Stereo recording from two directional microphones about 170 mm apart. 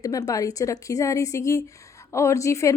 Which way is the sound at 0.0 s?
20° left (ahead or behind).